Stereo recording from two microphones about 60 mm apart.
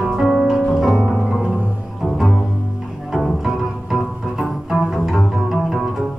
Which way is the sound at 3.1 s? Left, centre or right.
Centre.